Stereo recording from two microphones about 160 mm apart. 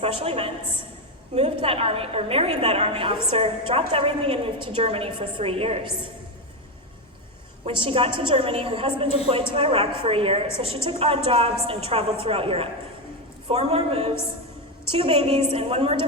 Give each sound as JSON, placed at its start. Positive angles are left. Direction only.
{"t": 0.0, "sound": "a woman's voice", "side_deg": -35}
{"t": 7.6, "sound": "a woman's voice", "side_deg": -35}